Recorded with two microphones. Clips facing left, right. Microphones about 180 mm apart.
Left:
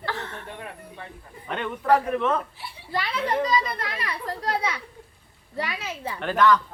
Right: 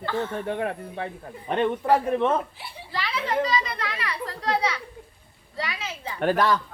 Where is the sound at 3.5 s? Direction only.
45° left (ahead or behind).